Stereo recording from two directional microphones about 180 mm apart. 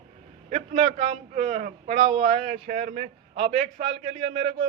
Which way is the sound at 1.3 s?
40° right (ahead or behind).